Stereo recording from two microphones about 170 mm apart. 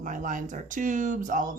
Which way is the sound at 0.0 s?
50° right (ahead or behind).